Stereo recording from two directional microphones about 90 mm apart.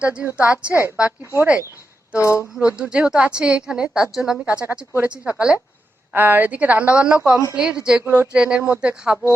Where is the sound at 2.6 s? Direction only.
15° right (ahead or behind).